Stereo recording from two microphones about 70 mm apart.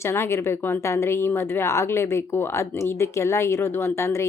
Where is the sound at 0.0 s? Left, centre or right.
Left.